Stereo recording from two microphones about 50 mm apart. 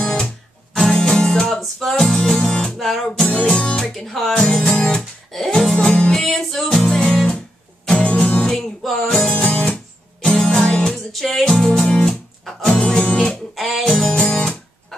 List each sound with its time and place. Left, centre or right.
0.0 s music: centre
3.1 s music: centre
3.9 s music: centre
6.1 s music: centre; by 8.5 s left
8.5 s music: centre
9.5 s guitar: centre
10.2 s music: centre
11.1 s music: centre
12.8 s music: centre
13.6 s music: centre
13.9 s music: left